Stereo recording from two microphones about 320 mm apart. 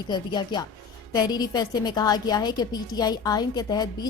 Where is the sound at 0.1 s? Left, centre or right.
Centre.